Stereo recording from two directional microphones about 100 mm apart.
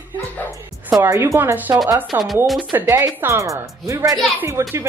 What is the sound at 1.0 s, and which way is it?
Speech, 25° right (ahead or behind).